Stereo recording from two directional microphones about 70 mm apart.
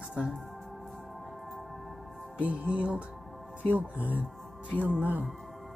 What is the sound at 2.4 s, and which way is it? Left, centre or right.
Music, centre.